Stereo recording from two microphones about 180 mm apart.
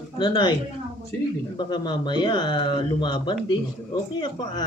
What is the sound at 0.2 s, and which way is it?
Speech, 25° left (ahead or behind).